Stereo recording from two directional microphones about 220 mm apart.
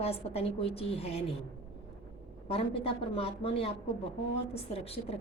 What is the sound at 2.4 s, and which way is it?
A woman's voice, 25° left (ahead or behind).